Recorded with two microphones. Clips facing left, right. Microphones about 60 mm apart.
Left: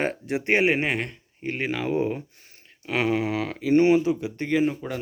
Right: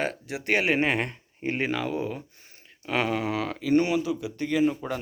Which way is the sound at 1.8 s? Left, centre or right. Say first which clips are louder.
Left 5 dB; left.